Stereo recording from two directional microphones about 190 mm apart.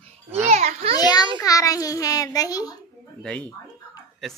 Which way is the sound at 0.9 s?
20° left (ahead or behind).